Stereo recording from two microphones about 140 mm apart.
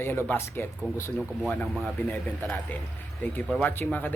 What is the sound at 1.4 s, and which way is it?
Speech, centre (ahead or behind).